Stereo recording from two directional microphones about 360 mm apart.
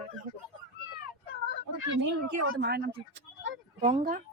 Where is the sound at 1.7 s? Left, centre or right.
Right.